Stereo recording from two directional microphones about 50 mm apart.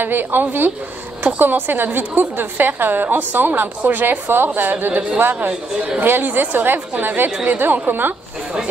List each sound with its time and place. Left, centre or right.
0.0 s a woman's voice: right